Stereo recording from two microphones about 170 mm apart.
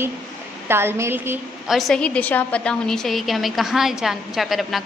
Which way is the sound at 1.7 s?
Centre (ahead or behind).